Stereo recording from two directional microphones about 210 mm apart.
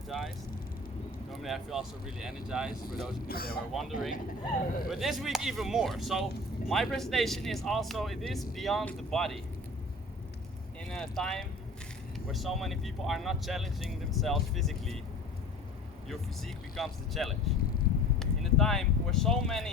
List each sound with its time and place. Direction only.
1.4 s speech: centre (ahead or behind)
3.2 s speech: 45° left (ahead or behind)
3.7 s speech: centre (ahead or behind)
10.8 s speech: 5° left (ahead or behind)
16.0 s speech: centre (ahead or behind)